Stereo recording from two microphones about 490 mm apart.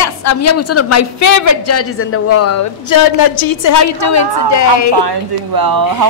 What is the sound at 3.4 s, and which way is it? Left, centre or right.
A woman's voice, left.